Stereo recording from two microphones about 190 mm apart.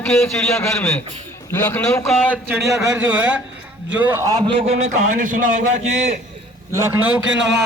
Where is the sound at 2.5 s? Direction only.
10° right (ahead or behind).